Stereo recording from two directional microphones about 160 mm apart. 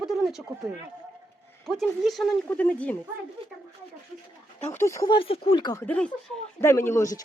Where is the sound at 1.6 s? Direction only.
Centre (ahead or behind).